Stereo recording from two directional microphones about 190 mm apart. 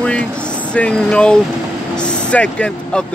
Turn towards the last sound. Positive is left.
turn(degrees=5)  # may be behind; listen again after turning